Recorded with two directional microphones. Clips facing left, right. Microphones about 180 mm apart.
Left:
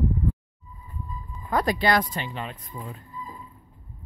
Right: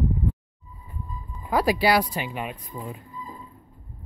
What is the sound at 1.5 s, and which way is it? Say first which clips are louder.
Speech: right 2 dB; 5° right (ahead or behind).